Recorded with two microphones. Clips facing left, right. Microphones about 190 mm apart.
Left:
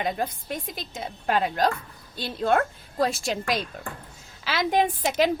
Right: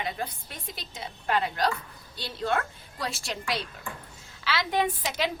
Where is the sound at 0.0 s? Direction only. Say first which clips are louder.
Left 6 dB; 50° left (ahead or behind).